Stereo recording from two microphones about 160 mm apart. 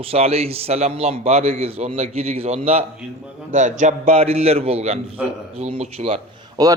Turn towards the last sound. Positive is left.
turn(degrees=-25)  # may be behind; listen again after turning